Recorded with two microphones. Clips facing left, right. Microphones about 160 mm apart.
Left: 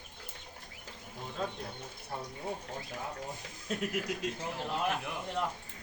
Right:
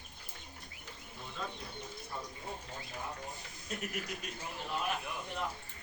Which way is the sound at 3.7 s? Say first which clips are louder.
Left 6 dB; 85° left.